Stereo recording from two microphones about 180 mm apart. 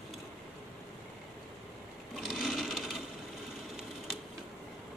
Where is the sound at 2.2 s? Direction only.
Centre (ahead or behind).